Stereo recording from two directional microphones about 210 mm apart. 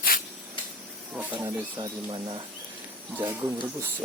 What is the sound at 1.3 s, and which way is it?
Speech, 20° right (ahead or behind).